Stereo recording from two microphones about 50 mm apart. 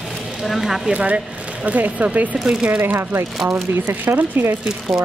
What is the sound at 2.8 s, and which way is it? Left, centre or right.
Speech, right.